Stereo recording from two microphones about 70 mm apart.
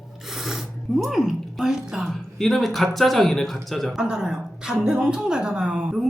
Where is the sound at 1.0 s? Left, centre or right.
Centre.